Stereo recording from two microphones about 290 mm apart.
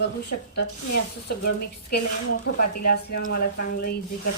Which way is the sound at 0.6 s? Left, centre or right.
Left.